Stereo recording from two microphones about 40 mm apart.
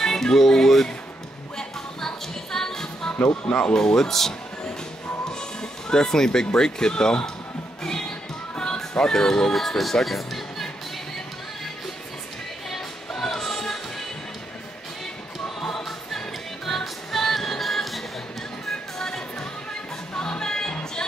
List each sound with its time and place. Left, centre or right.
0.0 s music: centre
3.4 s speech: left
3.7 s speech: centre
8.9 s speech: centre
12.6 s music: centre
15.4 s choir: centre
16.6 s music: centre
18.7 s music: centre